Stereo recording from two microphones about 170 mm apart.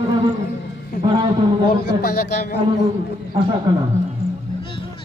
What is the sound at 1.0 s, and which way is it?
Speech, 25° right (ahead or behind).